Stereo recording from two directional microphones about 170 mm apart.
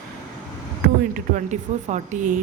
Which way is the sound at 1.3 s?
45° right (ahead or behind).